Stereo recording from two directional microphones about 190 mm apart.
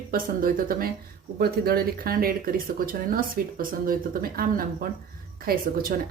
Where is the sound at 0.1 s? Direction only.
50° right (ahead or behind).